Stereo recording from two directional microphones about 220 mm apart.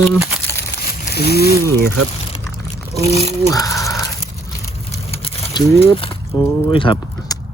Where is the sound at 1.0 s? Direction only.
45° left (ahead or behind).